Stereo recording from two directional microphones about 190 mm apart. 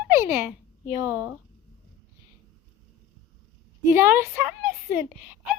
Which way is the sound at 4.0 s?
10° right (ahead or behind).